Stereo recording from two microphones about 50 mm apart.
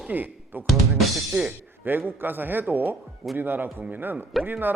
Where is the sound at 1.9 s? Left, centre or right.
Right.